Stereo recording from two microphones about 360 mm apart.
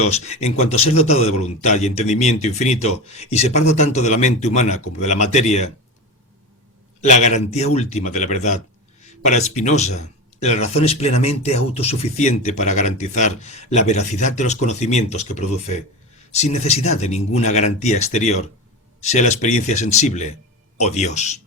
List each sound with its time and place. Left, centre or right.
0.1 s speech: centre
7.0 s speech: centre